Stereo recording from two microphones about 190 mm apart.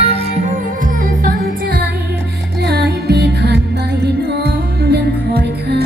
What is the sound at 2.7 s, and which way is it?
Music, 60° right (ahead or behind).